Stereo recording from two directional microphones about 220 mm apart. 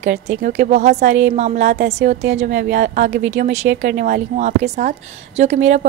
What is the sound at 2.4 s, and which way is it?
A woman's voice, 35° right (ahead or behind).